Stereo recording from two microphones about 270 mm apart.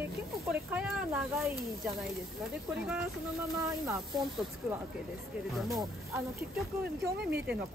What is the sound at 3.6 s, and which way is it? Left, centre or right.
Speech, centre.